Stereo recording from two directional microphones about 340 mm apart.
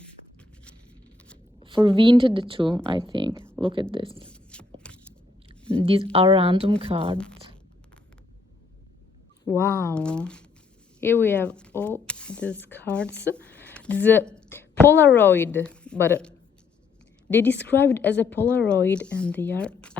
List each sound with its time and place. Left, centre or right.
1.6 s a woman's voice: centre
4.5 s a sound: centre
5.7 s a woman's voice: centre
9.4 s speech: centre
13.2 s a sound: centre
14.8 s a woman's voice: centre